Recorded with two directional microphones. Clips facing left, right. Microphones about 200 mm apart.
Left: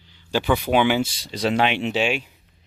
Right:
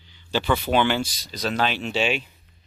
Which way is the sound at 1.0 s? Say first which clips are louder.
Left 5 dB; 30° left (ahead or behind).